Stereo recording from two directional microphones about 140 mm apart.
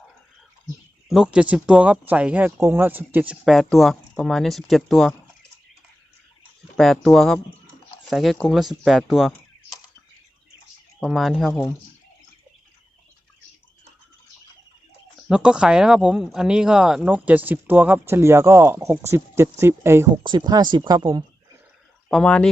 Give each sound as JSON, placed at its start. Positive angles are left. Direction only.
{"t": 1.0, "sound": "speech", "side_deg": -5}
{"t": 6.7, "sound": "speech", "side_deg": 0}
{"t": 11.0, "sound": "speech", "side_deg": 0}
{"t": 15.3, "sound": "speech", "side_deg": -5}
{"t": 20.2, "sound": "speech", "side_deg": -30}
{"t": 22.1, "sound": "speech", "side_deg": 5}